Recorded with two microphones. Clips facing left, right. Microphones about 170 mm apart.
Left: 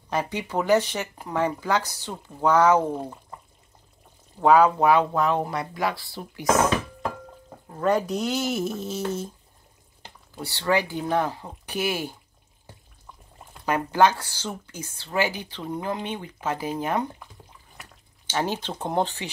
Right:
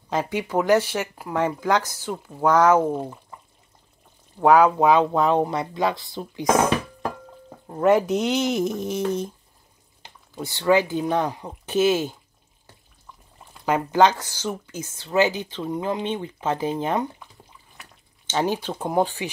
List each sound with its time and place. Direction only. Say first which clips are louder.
0.1 s speech: right 3 dB; 15° right (ahead or behind)
4.4 s speech: right 2 dB; 10° right (ahead or behind)
7.8 s speech: right 5 dB; 20° right (ahead or behind)
10.3 s speech: right 5 dB; 15° right (ahead or behind)
13.7 s speech: right 2 dB; 20° right (ahead or behind)
14.7 s speech: right 4 dB; 15° left (ahead or behind)
15.0 s speech: right 5 dB; 20° right (ahead or behind)
18.2 s speech: right 3 dB; 20° right (ahead or behind)
18.7 s speech: right 3 dB; 5° right (ahead or behind)